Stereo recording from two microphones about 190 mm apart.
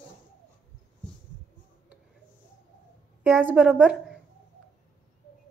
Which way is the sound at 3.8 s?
Centre (ahead or behind).